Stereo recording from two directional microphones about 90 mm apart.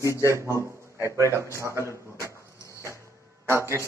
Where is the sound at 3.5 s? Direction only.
30° right (ahead or behind).